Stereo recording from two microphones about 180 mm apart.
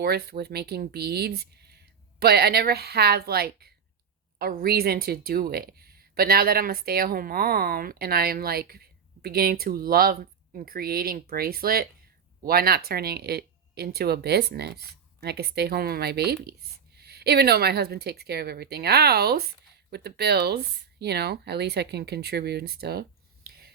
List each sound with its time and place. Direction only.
0.0 s speech: 60° right (ahead or behind)